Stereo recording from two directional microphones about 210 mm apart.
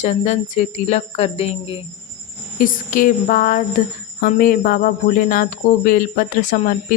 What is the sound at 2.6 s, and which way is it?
Speech, 40° left (ahead or behind).